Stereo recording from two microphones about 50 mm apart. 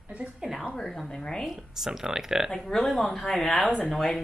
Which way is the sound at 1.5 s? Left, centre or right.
Centre.